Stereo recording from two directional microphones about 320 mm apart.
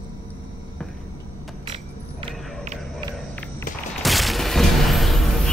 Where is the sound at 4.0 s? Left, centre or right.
Centre.